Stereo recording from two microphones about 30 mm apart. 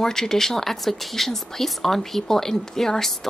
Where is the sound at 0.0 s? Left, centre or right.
Centre.